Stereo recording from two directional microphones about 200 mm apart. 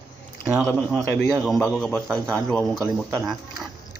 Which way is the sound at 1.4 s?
Centre (ahead or behind).